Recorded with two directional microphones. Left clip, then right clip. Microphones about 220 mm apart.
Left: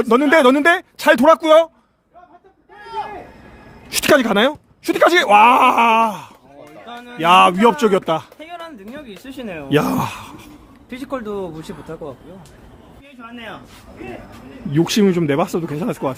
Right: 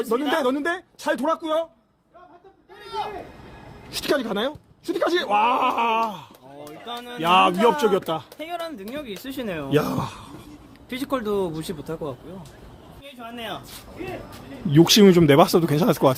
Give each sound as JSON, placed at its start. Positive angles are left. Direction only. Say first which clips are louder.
{"t": 0.0, "sound": "speech", "louder": "left 10 dB", "side_deg": 45}
{"t": 3.8, "sound": "speech", "louder": "left 10 dB", "side_deg": 35}
{"t": 6.8, "sound": "music", "louder": "right 1 dB", "side_deg": -20}
{"t": 7.2, "sound": "a man's voice", "louder": "left 6 dB", "side_deg": 20}
{"t": 8.4, "sound": "speech", "louder": "right 2 dB", "side_deg": -20}
{"t": 9.7, "sound": "speech", "louder": "left 6 dB", "side_deg": 35}
{"t": 10.8, "sound": "speech", "louder": "right 1 dB", "side_deg": -25}
{"t": 13.2, "sound": "speech", "louder": "even", "side_deg": -55}
{"t": 14.7, "sound": "speech", "louder": "right 2 dB", "side_deg": -5}